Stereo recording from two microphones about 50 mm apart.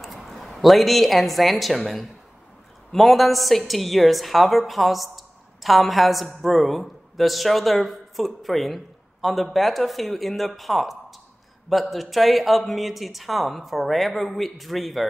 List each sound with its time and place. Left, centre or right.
0.0 s a woman's voice: centre